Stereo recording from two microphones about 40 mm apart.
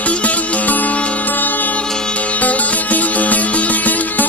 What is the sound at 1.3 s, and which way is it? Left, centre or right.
Music, left.